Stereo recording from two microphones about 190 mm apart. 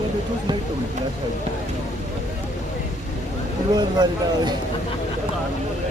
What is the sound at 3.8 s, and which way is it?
Speech, 20° right (ahead or behind).